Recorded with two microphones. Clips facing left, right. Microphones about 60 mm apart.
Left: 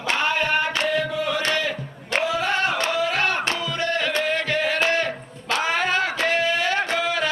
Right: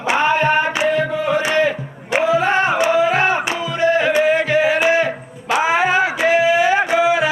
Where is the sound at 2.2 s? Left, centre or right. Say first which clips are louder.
Right 8 dB; right.